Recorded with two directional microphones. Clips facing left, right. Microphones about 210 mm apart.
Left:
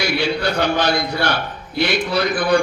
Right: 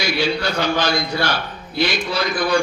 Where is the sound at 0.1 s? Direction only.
60° left (ahead or behind).